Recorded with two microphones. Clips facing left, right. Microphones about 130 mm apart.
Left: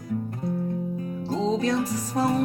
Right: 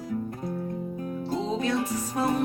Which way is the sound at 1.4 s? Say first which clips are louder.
Left 4 dB; 35° left (ahead or behind).